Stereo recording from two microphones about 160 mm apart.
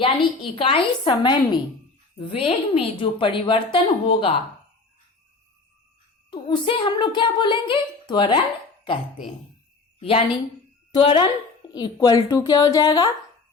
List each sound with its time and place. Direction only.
0.0 s a woman's voice: 35° left (ahead or behind)
6.3 s a woman's voice: 30° left (ahead or behind)
10.0 s a woman's voice: 35° left (ahead or behind)